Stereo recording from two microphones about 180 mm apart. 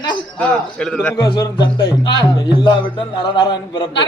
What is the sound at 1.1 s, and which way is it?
Speech, 25° left (ahead or behind).